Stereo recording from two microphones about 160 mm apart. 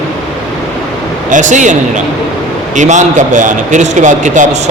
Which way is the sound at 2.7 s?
50° right (ahead or behind).